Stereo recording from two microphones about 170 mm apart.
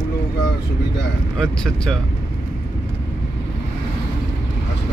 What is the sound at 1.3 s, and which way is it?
Speech, 5° left (ahead or behind).